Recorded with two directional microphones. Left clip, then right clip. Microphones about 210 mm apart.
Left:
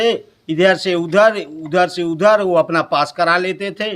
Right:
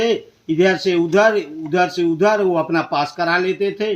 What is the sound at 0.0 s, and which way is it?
Speech, 25° left (ahead or behind).